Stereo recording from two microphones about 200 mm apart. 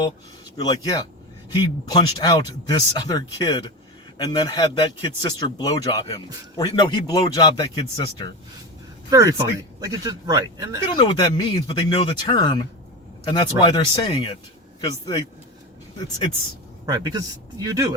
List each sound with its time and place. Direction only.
0.5 s speech: 20° left (ahead or behind)
9.0 s speech: 15° right (ahead or behind)
10.9 s speech: 25° left (ahead or behind)
16.8 s speech: 20° right (ahead or behind)